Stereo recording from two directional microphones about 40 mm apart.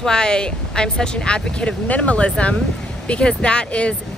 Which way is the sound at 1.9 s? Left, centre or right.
Left.